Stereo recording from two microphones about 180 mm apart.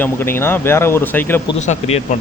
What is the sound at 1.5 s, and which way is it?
Speech, 40° left (ahead or behind).